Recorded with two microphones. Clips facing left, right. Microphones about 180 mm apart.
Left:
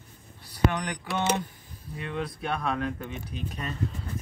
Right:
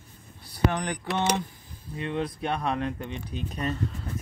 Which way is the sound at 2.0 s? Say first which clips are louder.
Right 3 dB; 20° right (ahead or behind).